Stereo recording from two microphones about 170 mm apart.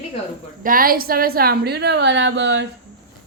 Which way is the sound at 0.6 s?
55° right (ahead or behind).